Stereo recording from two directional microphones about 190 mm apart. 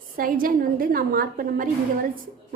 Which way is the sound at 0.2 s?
50° right (ahead or behind).